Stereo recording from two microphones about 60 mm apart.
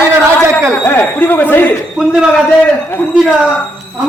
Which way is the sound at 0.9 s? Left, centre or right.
Left.